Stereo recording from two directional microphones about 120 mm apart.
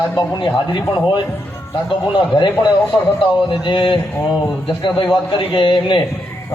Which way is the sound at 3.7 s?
45° left (ahead or behind).